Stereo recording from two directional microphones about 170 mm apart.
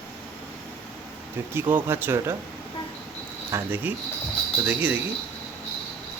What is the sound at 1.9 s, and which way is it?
Speech, 15° right (ahead or behind).